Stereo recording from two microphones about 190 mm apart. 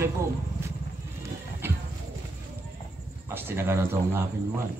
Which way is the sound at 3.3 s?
10° right (ahead or behind).